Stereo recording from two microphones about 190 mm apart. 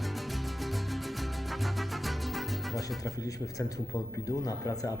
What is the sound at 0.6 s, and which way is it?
Music, centre (ahead or behind).